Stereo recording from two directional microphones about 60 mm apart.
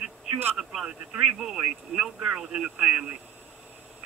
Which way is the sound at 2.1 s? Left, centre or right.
Centre.